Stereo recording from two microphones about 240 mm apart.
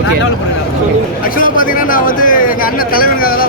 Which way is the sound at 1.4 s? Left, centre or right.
Left.